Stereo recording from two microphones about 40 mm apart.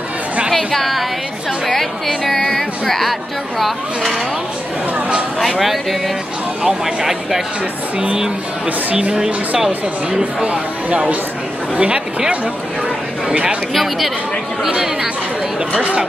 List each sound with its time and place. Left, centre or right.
0.7 s speech: centre
5.4 s speech: centre
10.4 s speech: right
13.7 s speech: centre
15.8 s speech: right